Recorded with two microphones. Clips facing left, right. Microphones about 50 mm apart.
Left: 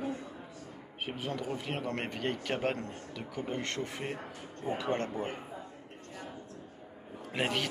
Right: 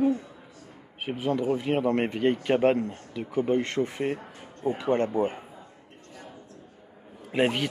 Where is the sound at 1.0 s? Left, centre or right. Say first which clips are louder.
Right 9 dB; centre.